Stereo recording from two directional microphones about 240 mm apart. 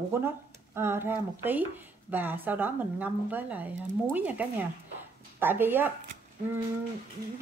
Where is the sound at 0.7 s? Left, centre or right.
Centre.